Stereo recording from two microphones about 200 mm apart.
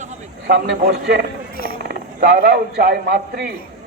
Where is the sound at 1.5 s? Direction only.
45° left (ahead or behind).